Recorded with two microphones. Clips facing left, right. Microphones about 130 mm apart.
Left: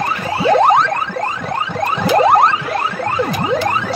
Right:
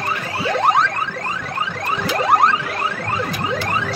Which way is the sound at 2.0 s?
25° left (ahead or behind).